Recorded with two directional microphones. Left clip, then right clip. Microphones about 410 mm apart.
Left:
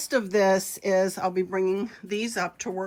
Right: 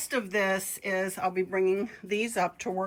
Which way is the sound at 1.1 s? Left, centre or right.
Left.